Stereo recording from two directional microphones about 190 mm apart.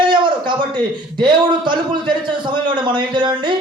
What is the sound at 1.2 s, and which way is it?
Speech, 25° right (ahead or behind).